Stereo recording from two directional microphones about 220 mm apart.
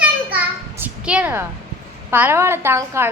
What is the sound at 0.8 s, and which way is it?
A woman's voice, 5° right (ahead or behind).